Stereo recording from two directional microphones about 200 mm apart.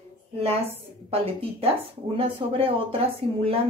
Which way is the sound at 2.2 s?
25° right (ahead or behind).